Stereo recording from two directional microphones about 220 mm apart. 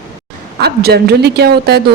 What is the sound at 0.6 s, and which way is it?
Speech, 45° right (ahead or behind).